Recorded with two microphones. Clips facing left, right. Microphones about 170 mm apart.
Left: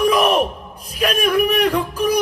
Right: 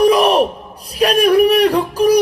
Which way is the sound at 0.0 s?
35° right (ahead or behind).